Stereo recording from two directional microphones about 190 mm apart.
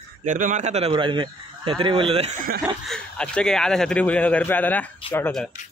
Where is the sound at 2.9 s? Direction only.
5° left (ahead or behind).